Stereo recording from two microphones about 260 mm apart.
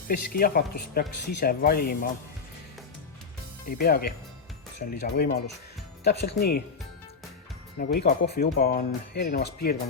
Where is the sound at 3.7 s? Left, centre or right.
Left.